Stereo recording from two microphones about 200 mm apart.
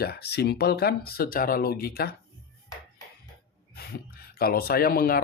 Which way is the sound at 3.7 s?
50° left (ahead or behind).